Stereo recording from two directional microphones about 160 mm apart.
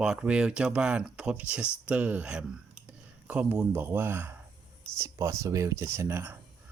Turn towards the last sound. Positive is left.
turn(degrees=-15)  # may be behind; listen again after turning